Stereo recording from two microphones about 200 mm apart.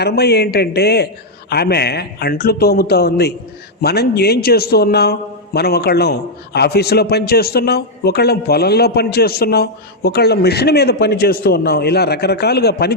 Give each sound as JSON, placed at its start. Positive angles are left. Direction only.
{"t": 0.0, "sound": "a man's voice", "side_deg": 55}